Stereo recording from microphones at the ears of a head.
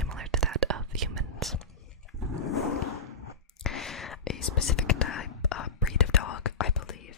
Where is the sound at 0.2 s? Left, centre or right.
Right.